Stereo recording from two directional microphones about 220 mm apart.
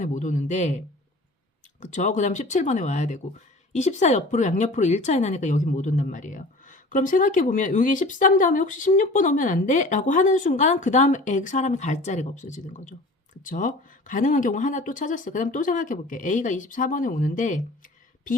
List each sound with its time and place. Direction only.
0.0 s speech: 35° left (ahead or behind)
1.8 s speech: 35° left (ahead or behind)